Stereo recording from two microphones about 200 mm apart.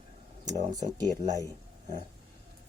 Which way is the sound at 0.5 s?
20° right (ahead or behind).